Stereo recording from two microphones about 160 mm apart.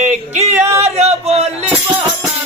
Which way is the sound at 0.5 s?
15° right (ahead or behind).